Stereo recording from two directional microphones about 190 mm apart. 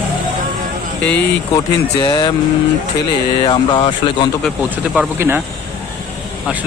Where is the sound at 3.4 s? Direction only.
25° left (ahead or behind).